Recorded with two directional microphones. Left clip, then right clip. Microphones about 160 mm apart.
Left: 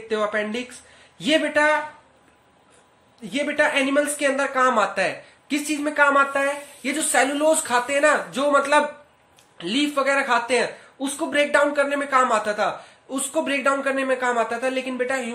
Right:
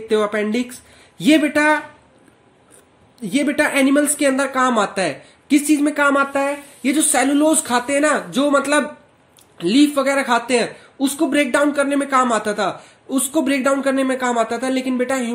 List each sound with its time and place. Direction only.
0.1 s a man's voice: 45° right (ahead or behind)
3.2 s speech: 45° right (ahead or behind)